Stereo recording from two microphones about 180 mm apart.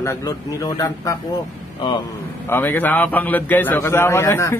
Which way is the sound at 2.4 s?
10° left (ahead or behind).